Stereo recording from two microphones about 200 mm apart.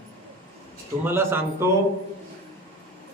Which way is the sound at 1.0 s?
10° right (ahead or behind).